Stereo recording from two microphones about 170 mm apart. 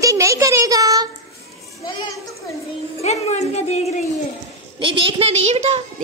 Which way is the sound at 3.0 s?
40° left (ahead or behind).